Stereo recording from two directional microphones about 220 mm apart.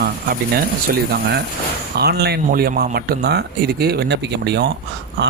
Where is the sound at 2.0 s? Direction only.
45° right (ahead or behind).